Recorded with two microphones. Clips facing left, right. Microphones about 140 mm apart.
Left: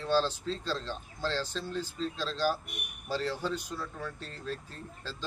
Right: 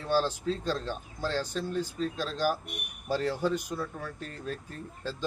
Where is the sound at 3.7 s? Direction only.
55° right (ahead or behind).